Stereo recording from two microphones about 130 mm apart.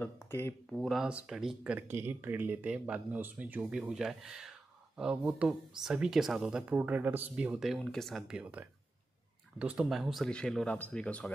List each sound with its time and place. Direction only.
0.0 s speech: 20° left (ahead or behind)
0.7 s speech: centre (ahead or behind)